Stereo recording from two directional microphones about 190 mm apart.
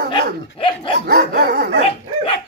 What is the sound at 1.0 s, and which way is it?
Dog, 60° right (ahead or behind).